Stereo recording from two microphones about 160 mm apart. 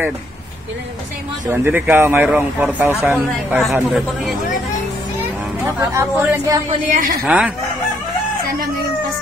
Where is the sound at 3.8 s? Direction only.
Centre (ahead or behind).